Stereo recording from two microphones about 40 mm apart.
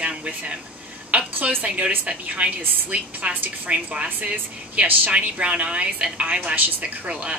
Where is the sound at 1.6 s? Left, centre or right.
Right.